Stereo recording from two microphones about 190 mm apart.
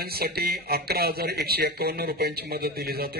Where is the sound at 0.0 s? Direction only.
55° right (ahead or behind).